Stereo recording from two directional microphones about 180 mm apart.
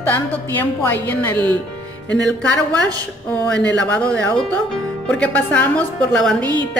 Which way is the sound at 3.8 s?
5° left (ahead or behind).